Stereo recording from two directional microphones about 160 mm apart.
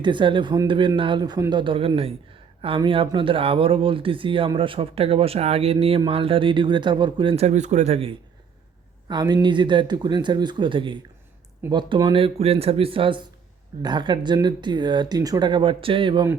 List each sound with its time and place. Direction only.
0.0 s speech: 30° right (ahead or behind)
9.0 s speech: 25° right (ahead or behind)